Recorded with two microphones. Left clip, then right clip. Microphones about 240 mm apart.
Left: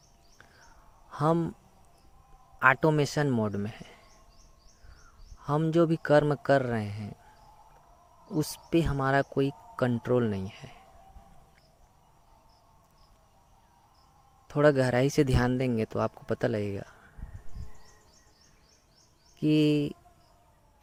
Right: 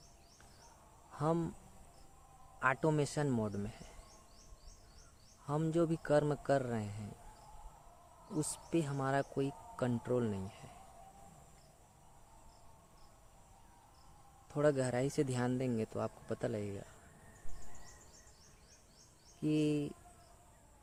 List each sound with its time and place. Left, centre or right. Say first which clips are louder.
1.1 s speech: left 9 dB; left
2.6 s speech: left 10 dB; left
5.4 s speech: left 9 dB; left
8.3 s speech: left 9 dB; left
14.4 s speech: left 10 dB; left
19.4 s speech: left 10 dB; left